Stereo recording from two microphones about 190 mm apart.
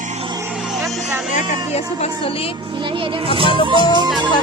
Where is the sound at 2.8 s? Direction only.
25° right (ahead or behind).